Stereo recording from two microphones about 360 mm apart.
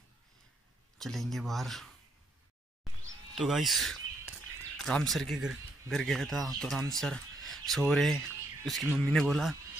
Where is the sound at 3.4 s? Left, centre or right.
Centre.